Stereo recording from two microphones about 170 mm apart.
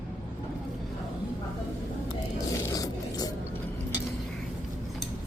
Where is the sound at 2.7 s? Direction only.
20° left (ahead or behind).